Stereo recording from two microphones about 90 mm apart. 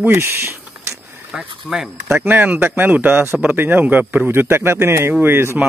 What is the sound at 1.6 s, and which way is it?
Speech, 5° right (ahead or behind).